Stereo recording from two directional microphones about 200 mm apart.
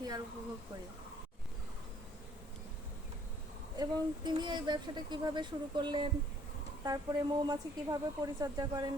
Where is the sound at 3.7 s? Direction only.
20° right (ahead or behind).